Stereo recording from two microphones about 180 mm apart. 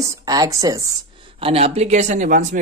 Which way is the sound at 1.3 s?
35° right (ahead or behind).